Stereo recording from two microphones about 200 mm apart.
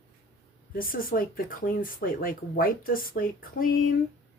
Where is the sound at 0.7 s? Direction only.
45° left (ahead or behind).